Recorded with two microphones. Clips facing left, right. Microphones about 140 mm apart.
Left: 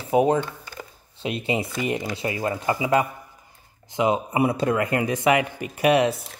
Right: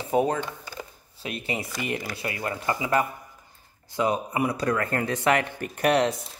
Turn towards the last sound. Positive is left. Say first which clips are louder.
# left 3 dB
turn(degrees=5)  # may be behind; listen again after turning